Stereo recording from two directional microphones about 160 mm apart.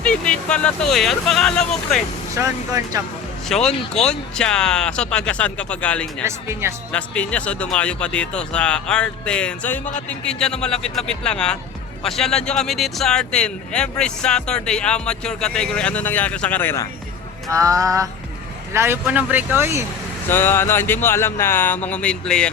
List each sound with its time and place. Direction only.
0.0 s speech: 5° left (ahead or behind)
2.3 s speech: 20° right (ahead or behind)
3.5 s speech: 5° left (ahead or behind)
6.2 s speech: 15° right (ahead or behind)
6.9 s speech: 10° left (ahead or behind)
17.5 s speech: 20° right (ahead or behind)
20.2 s speech: 15° left (ahead or behind)